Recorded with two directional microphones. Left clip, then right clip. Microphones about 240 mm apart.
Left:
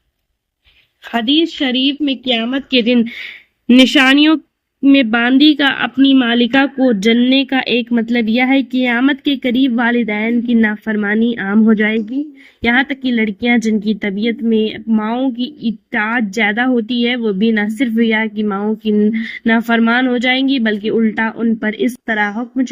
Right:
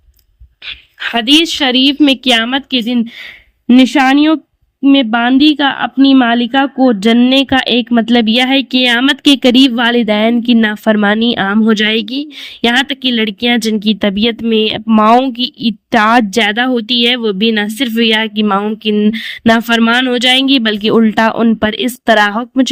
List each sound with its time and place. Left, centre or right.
1.1 s speech: right
2.5 s speech: right